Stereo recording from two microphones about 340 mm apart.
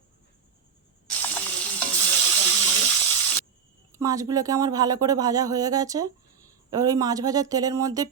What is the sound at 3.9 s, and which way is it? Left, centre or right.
Speech, centre.